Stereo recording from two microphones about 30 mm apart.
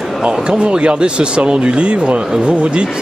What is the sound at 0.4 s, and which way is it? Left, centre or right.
Speech, right.